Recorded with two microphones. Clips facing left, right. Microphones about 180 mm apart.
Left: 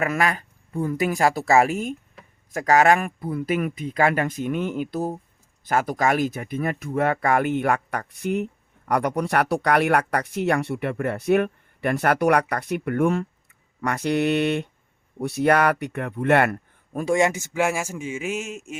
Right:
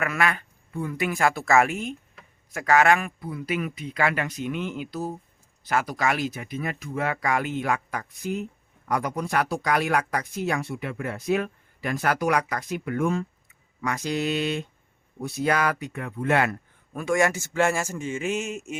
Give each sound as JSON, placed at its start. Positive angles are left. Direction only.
{"t": 0.0, "sound": "speech", "side_deg": 35}
{"t": 17.2, "sound": "a man's voice", "side_deg": 20}